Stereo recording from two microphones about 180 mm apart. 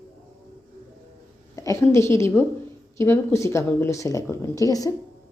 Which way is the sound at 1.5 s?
15° left (ahead or behind).